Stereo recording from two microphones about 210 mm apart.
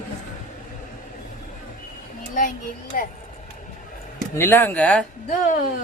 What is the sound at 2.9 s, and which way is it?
Speech, 40° left (ahead or behind).